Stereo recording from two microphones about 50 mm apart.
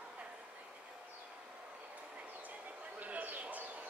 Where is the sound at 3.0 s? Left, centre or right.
Right.